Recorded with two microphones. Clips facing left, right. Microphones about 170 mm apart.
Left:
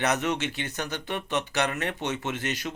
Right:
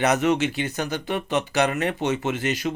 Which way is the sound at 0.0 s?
90° right.